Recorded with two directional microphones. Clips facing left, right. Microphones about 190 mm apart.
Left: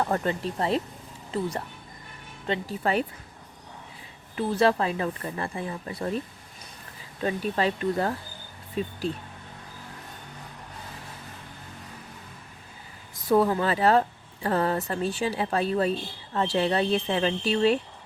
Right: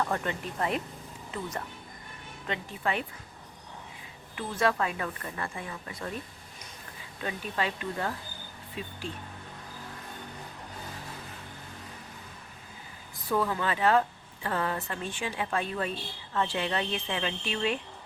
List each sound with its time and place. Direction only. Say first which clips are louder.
0.0 s a woman's voice: left 5 dB; 35° left (ahead or behind)
4.4 s a woman's voice: left 5 dB; 35° left (ahead or behind)
7.2 s a woman's voice: left 7 dB; 35° left (ahead or behind)
13.3 s a woman's voice: left 7 dB; 35° left (ahead or behind)